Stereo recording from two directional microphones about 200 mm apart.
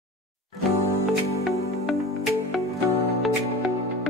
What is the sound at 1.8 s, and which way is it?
Music, centre (ahead or behind).